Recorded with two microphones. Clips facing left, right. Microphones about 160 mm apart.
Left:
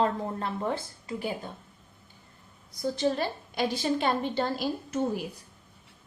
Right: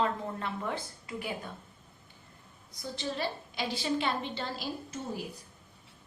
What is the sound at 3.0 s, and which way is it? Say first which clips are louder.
A woman's voice: left 5 dB; 45° left (ahead or behind).